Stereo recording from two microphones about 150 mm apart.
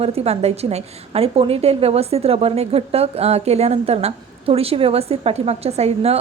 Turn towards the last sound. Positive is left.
turn(degrees=-45)  # may be behind; listen again after turning